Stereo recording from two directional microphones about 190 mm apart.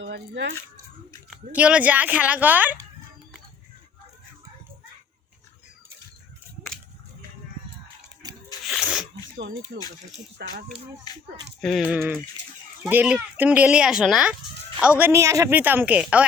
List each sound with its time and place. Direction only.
0.0 s speech: 70° right (ahead or behind)
1.5 s speech: 5° right (ahead or behind)
8.6 s sneeze: centre (ahead or behind)
9.7 s speech: 55° right (ahead or behind)
11.1 s speech: 20° left (ahead or behind)
11.6 s speech: centre (ahead or behind)